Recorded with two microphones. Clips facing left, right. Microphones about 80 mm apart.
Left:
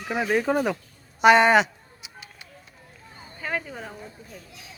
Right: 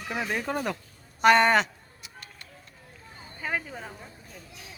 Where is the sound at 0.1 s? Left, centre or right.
Centre.